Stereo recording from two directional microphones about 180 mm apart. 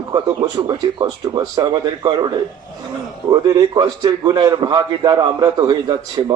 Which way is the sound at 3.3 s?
20° right (ahead or behind).